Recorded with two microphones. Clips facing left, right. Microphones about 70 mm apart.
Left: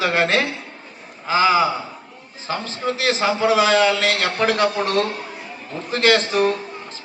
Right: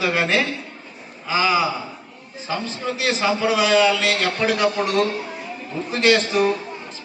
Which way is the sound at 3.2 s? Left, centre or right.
Left.